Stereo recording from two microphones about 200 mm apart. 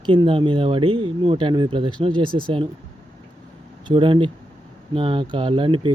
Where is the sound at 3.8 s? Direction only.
25° right (ahead or behind).